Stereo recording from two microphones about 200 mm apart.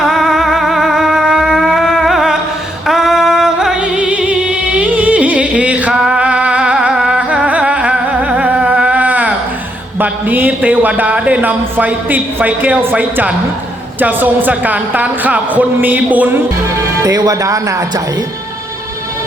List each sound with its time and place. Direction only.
0.0 s music: centre (ahead or behind)
10.0 s a man's voice: 10° right (ahead or behind)